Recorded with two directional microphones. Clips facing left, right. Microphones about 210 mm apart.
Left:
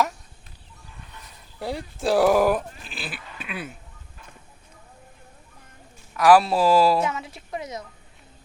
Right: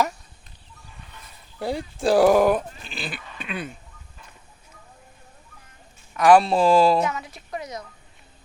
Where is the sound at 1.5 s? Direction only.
Centre (ahead or behind).